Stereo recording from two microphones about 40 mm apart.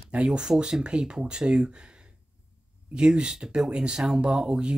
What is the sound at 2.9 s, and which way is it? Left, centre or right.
Speech, right.